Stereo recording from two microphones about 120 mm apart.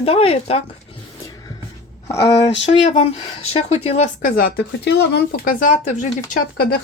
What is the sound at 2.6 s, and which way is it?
Speech, 75° left (ahead or behind).